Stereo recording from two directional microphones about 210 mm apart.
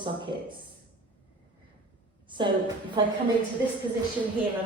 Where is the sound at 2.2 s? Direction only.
20° right (ahead or behind).